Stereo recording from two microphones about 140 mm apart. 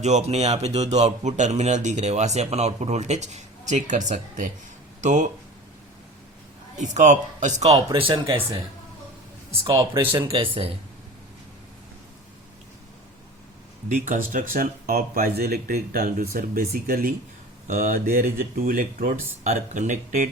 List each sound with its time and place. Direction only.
0.0 s speech: 55° right (ahead or behind)
6.7 s speech: 60° right (ahead or behind)
7.9 s speech: 40° right (ahead or behind)
10.1 s speech: 40° right (ahead or behind)
13.8 s speech: 65° right (ahead or behind)
14.5 s speech: 85° right
19.5 s speech: 55° right (ahead or behind)